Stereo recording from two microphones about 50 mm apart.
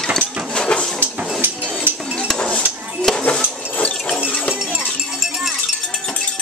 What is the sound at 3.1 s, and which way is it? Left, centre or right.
Dishes, centre.